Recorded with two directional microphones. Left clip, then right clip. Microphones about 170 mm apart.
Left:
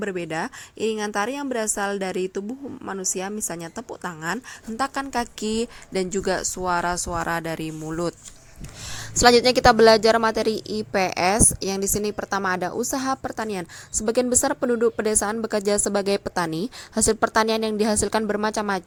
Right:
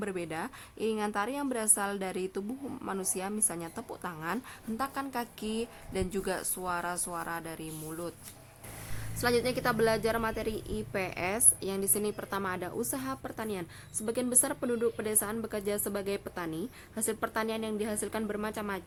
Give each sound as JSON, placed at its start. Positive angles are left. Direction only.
{"t": 0.0, "sound": "a woman's voice", "side_deg": 25}
{"t": 9.1, "sound": "a woman's voice", "side_deg": 40}